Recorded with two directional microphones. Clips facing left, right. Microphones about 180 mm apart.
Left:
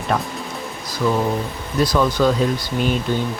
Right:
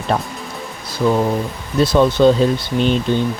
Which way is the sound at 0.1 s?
30° right (ahead or behind).